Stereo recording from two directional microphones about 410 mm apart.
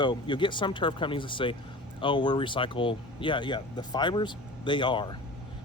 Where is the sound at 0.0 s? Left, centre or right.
Centre.